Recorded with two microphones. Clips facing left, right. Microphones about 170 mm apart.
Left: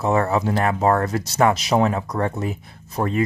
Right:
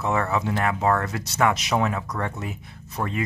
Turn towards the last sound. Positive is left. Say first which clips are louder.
# left 5 dB
turn(degrees=35)  # may be behind; listen again after turning